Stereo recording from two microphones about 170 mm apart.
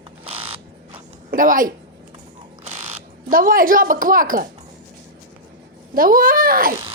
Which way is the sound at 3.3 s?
55° right (ahead or behind).